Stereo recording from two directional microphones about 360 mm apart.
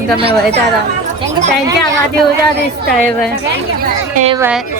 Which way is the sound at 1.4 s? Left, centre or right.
Right.